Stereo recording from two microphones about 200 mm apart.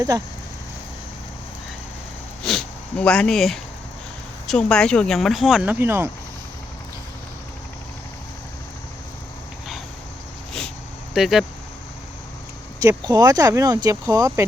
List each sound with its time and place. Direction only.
0.1 s speech: 20° right (ahead or behind)
2.4 s speech: centre (ahead or behind)
11.1 s speech: centre (ahead or behind)
12.8 s speech: 20° right (ahead or behind)